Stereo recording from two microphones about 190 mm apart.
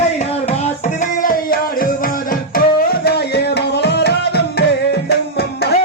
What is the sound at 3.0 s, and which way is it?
Music, 60° left (ahead or behind).